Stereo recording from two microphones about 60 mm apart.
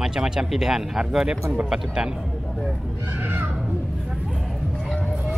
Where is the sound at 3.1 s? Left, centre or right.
Right.